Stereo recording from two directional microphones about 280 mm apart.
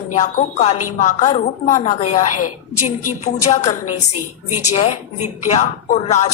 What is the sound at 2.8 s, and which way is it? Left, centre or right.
Speech, left.